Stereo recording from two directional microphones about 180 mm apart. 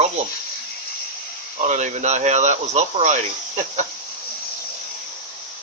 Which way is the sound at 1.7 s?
40° right (ahead or behind).